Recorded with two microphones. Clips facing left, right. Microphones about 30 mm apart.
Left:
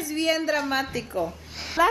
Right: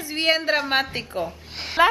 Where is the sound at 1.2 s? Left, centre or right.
Right.